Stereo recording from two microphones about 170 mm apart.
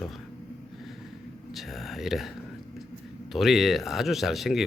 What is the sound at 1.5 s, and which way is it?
Speech, centre (ahead or behind).